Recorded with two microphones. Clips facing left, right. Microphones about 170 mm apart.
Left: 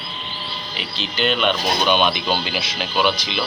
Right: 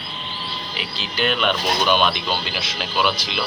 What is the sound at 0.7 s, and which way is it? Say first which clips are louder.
Speech: left 2 dB; 5° right (ahead or behind).